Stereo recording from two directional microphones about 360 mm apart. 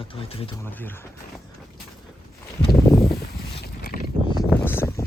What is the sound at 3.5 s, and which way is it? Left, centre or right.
Boat, left.